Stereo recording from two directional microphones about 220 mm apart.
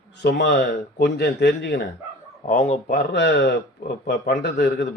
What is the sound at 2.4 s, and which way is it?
Speech, 30° left (ahead or behind).